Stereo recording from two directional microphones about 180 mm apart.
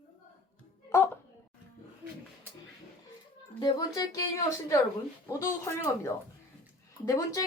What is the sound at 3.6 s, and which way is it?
A woman's voice, 20° left (ahead or behind).